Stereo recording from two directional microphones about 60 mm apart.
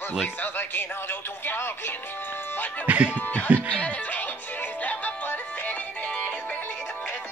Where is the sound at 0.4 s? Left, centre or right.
Left.